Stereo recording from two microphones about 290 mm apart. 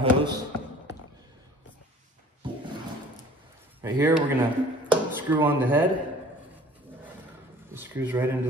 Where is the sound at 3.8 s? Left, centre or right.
Centre.